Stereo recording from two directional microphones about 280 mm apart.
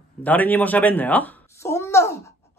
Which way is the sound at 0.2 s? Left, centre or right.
Centre.